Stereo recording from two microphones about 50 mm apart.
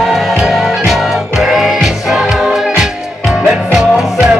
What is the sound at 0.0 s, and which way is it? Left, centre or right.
Music, centre.